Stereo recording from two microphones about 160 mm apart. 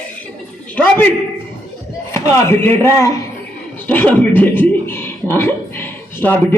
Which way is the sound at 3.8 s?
10° left (ahead or behind).